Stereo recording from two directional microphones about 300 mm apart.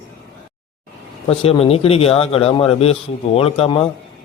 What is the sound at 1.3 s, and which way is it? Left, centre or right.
A man's voice, centre.